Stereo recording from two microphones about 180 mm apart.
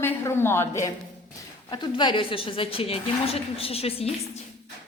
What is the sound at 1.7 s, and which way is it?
A woman's voice, 25° left (ahead or behind).